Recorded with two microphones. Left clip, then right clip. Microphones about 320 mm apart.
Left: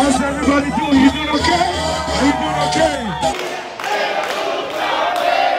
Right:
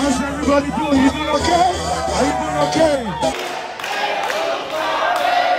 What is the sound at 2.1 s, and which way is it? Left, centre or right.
Music, centre.